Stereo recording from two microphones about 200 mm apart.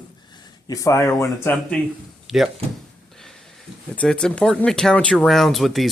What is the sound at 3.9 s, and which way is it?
Speech, 5° left (ahead or behind).